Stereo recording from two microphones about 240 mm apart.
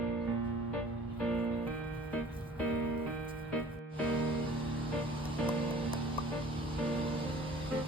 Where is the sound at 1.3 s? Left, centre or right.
Centre.